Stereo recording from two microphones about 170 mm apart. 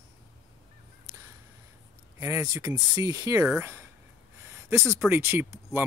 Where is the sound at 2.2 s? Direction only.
20° right (ahead or behind).